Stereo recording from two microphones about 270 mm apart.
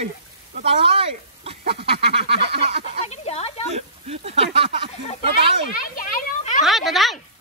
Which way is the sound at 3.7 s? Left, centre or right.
Right.